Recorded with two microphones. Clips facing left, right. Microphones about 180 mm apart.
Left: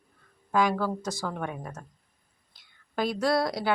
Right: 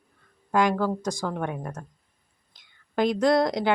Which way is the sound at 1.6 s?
Centre (ahead or behind).